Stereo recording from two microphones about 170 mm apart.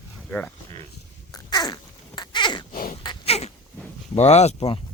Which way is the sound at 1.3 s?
25° left (ahead or behind).